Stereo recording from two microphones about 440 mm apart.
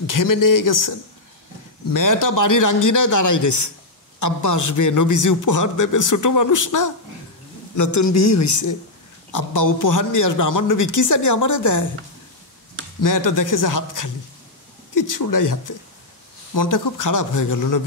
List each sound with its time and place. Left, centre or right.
0.0 s a man's voice: left
13.0 s a man's voice: left